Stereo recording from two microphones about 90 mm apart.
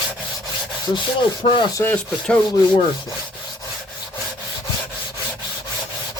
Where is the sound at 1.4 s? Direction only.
70° left (ahead or behind).